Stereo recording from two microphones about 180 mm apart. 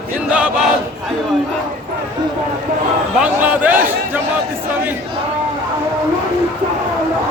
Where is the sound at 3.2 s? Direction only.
10° right (ahead or behind).